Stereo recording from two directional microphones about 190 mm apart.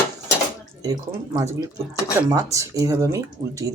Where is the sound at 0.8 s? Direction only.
20° right (ahead or behind).